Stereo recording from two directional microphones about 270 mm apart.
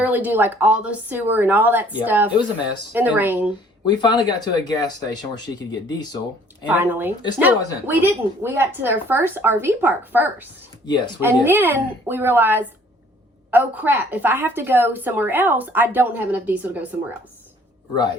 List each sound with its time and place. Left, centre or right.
0.0 s a woman's voice: centre
3.8 s speech: centre
6.7 s a woman's voice: centre
10.8 s speech: centre
11.2 s a woman's voice: centre